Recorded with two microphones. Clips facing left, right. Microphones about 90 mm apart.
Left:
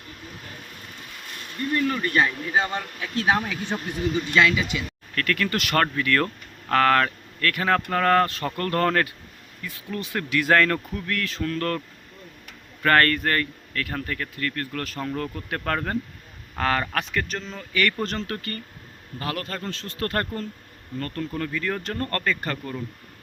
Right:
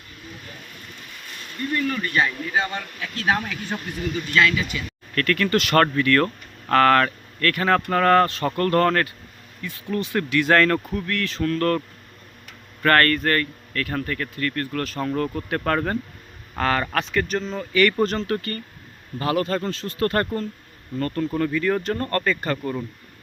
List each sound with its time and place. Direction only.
1.7 s speech: 25° left (ahead or behind)
5.1 s speech: 5° left (ahead or behind)
12.8 s speech: 5° left (ahead or behind); by 22.7 s 10° right (ahead or behind)